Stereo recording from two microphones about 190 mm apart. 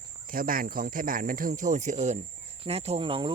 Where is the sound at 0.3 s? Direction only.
50° right (ahead or behind).